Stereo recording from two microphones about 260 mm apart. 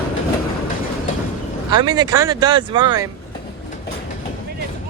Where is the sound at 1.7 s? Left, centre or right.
Centre.